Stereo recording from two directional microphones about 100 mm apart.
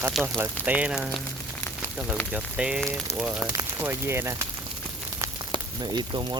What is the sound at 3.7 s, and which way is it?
Speech, 25° right (ahead or behind).